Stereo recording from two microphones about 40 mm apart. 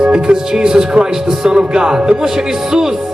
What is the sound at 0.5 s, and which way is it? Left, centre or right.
Speech, centre.